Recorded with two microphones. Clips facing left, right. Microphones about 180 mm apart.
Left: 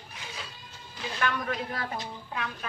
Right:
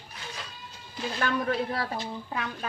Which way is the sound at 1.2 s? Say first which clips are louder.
Right 3 dB; 35° right (ahead or behind).